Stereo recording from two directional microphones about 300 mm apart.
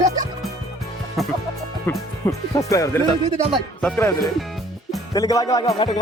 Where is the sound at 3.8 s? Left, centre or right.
Centre.